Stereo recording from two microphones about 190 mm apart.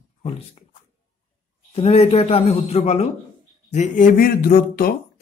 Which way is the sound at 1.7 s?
35° left (ahead or behind).